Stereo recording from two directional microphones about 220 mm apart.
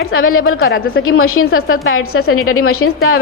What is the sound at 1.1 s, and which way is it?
A woman's voice, 70° left (ahead or behind).